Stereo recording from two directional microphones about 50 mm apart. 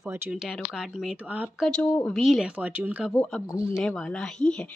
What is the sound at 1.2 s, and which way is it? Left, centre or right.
Speech, right.